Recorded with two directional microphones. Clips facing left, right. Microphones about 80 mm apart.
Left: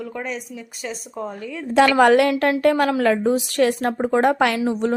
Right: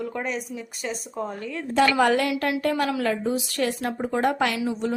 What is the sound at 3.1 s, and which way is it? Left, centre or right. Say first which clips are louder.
A woman's voice: left 7 dB; left.